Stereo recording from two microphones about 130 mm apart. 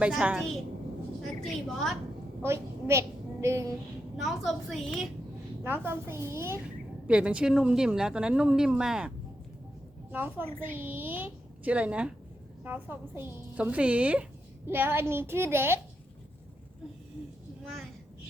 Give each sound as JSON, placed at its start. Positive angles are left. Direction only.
{"t": 0.0, "sound": "a woman's voice", "side_deg": -10}
{"t": 2.4, "sound": "a woman's voice", "side_deg": -20}
{"t": 4.2, "sound": "a woman's voice", "side_deg": 0}
{"t": 5.6, "sound": "a woman's voice", "side_deg": -15}
{"t": 7.1, "sound": "a woman's voice", "side_deg": -10}